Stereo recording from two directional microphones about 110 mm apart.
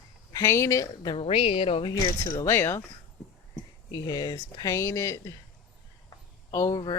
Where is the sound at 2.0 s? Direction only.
35° left (ahead or behind).